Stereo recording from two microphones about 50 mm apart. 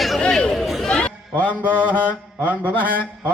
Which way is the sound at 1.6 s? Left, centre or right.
Right.